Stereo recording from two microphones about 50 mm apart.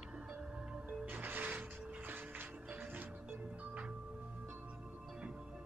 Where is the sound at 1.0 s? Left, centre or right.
Right.